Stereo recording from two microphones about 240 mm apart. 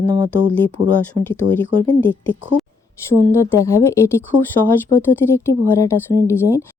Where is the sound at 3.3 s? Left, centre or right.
Centre.